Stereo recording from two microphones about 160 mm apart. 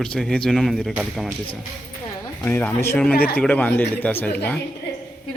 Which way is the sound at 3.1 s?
70° left (ahead or behind).